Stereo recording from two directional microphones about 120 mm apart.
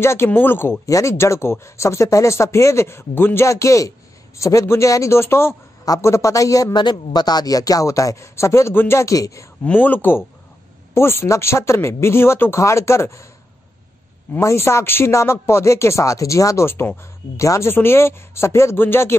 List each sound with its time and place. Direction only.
0.0 s speech: 20° left (ahead or behind)
9.7 s speech: 15° left (ahead or behind)
14.3 s speech: 20° left (ahead or behind)